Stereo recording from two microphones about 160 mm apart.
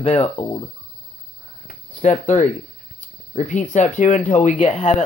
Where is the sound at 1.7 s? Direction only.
50° left (ahead or behind).